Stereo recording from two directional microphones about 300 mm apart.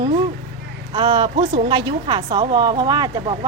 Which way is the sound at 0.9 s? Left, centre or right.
Centre.